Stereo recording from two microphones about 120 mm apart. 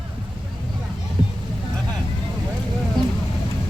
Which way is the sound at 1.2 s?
45° right (ahead or behind).